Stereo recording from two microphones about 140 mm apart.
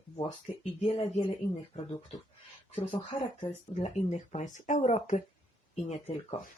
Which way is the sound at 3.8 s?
55° left (ahead or behind).